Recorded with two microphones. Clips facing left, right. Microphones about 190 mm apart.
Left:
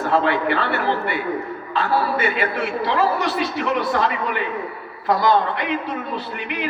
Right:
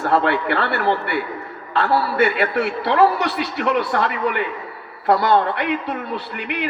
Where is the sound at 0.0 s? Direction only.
65° right (ahead or behind).